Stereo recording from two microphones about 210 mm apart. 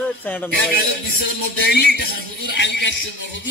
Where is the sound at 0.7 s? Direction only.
45° left (ahead or behind).